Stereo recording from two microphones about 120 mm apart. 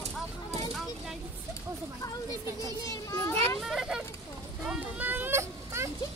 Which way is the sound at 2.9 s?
25° left (ahead or behind).